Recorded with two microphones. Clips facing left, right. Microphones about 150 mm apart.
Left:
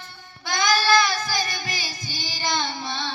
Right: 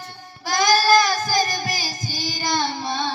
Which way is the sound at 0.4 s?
40° right (ahead or behind).